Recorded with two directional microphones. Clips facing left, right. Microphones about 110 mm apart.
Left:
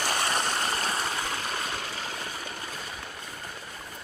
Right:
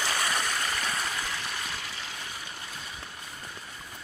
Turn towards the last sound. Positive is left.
turn(degrees=45)  # may be behind; listen again after turning